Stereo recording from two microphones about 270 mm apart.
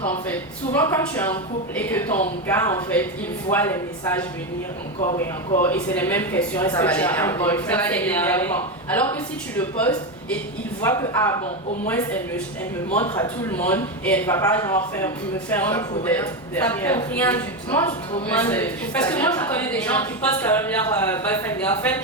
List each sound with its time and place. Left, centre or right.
0.3 s a man's voice: centre
4.9 s speech: left
5.6 s a man's voice: centre
13.5 s a man's voice: centre